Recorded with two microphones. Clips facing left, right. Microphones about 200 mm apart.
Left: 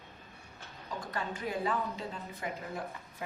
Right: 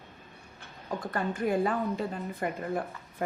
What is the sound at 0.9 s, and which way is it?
A woman's voice, 55° right (ahead or behind).